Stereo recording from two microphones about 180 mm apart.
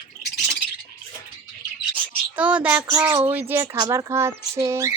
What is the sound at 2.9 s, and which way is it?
Speech, 25° right (ahead or behind).